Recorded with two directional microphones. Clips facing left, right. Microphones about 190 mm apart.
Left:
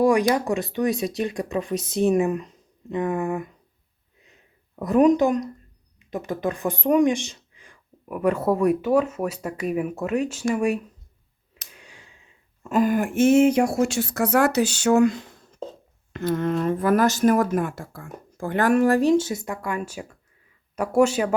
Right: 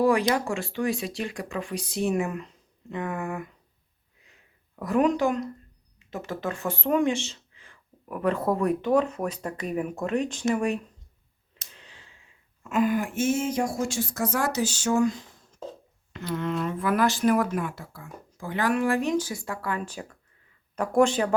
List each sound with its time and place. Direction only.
0.0 s speech: 15° left (ahead or behind)
4.8 s speech: 20° left (ahead or behind)
11.7 s a sound: 10° left (ahead or behind)
12.6 s speech: 40° left (ahead or behind); by 15.4 s 65° left (ahead or behind)
16.1 s speech: 45° left (ahead or behind); by 21.3 s 5° left (ahead or behind)